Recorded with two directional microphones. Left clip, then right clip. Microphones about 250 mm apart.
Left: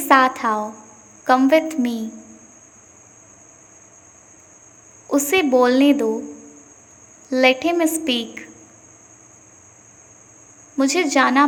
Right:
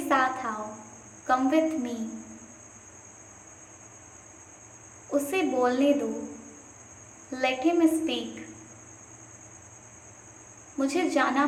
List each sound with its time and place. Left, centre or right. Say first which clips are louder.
0.1 s a woman's voice: left 11 dB; left
5.1 s a woman's voice: left 10 dB; left
7.3 s a woman's voice: left 10 dB; left
10.8 s a woman's voice: left 8 dB; left